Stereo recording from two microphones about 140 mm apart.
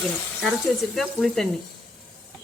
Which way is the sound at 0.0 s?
Centre (ahead or behind).